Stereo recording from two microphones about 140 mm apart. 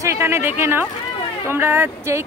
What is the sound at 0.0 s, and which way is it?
A woman's voice, 15° right (ahead or behind).